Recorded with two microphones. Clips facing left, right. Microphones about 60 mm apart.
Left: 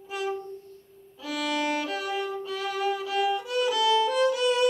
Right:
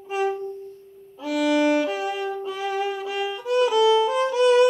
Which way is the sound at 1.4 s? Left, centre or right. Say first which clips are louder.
Right 8 dB; centre.